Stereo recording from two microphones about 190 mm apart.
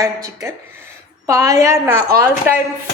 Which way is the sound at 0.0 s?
15° right (ahead or behind).